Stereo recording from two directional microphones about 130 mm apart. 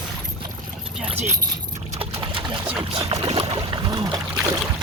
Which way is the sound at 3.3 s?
50° right (ahead or behind).